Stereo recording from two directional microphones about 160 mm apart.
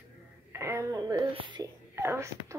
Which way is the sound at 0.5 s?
15° right (ahead or behind).